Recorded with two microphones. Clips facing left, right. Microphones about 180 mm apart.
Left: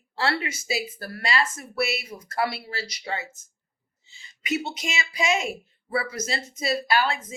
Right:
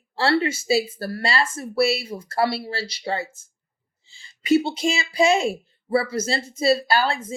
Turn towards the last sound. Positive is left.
turn(degrees=-30)  # may be behind; listen again after turning